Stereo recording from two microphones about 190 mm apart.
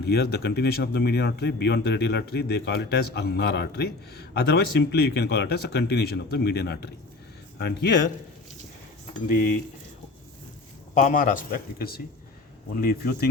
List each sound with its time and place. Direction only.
0.0 s a man's voice: 55° left (ahead or behind)
10.9 s a man's voice: 40° left (ahead or behind)